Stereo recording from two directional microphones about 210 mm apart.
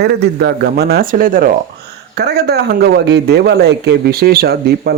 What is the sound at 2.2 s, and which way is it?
A man's voice, 50° right (ahead or behind).